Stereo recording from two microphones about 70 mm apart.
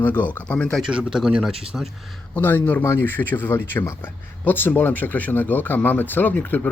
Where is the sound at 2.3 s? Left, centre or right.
Left.